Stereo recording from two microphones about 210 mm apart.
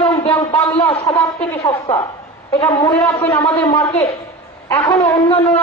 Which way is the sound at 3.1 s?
30° left (ahead or behind).